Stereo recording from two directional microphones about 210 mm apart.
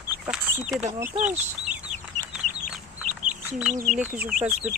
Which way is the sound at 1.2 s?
35° right (ahead or behind).